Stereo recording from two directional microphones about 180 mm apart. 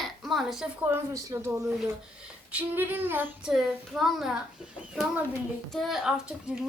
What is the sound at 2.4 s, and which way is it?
Female singing, 10° right (ahead or behind).